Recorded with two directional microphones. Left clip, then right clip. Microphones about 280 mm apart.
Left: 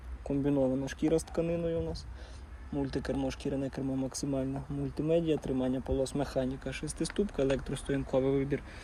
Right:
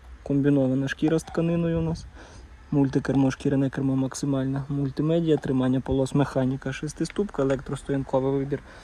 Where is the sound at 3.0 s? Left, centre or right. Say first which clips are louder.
Right 10 dB; right.